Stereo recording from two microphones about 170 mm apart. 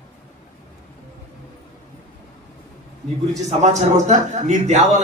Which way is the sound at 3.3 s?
45° right (ahead or behind).